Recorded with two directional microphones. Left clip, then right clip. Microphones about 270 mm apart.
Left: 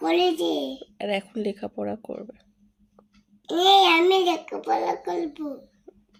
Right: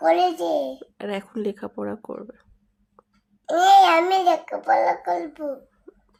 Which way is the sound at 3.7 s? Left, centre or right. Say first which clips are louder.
Right 2 dB; centre.